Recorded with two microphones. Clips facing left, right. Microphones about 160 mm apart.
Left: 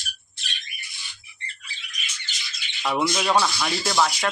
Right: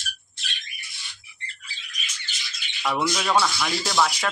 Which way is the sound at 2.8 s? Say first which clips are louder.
Left 1 dB; 10° left (ahead or behind).